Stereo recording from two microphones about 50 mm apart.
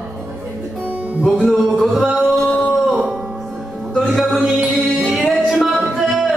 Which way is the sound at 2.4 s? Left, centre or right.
Centre.